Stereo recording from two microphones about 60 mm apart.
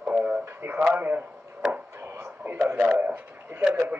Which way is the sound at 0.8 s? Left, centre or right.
Right.